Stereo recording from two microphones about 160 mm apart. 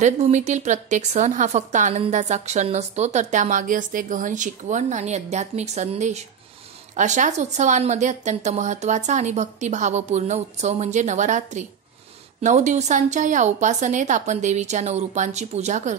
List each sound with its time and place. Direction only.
0.0 s a woman's voice: 45° right (ahead or behind)